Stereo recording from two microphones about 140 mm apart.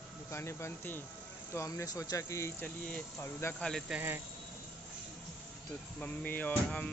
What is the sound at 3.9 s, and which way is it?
Speech, 15° right (ahead or behind).